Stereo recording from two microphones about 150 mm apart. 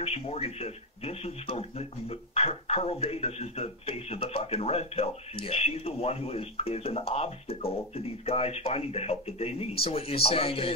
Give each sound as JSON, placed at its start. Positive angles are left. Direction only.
{"t": 0.0, "sound": "speech", "side_deg": 40}